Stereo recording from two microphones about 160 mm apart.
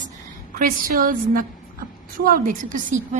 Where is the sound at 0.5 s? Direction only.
60° right (ahead or behind).